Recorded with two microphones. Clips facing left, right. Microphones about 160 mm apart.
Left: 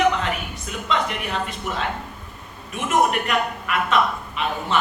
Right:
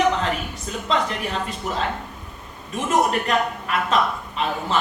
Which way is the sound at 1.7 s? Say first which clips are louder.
Right 1 dB; 35° right (ahead or behind).